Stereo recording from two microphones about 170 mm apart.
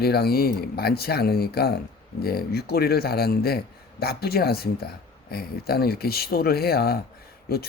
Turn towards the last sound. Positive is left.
turn(degrees=60)  # may be behind; listen again after turning